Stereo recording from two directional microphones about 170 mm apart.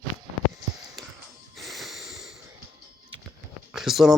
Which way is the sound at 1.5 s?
Centre (ahead or behind).